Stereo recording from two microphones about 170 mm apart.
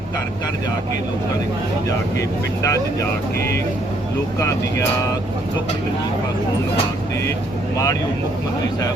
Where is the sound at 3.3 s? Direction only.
75° left (ahead or behind).